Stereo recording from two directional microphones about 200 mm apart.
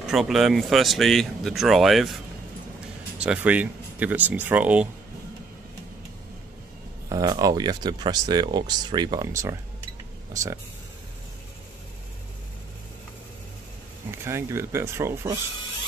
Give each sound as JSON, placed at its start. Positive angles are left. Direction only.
{"t": 0.0, "sound": "speech", "side_deg": 0}
{"t": 3.3, "sound": "speech", "side_deg": -5}
{"t": 7.1, "sound": "speech", "side_deg": -20}
{"t": 14.1, "sound": "speech", "side_deg": -15}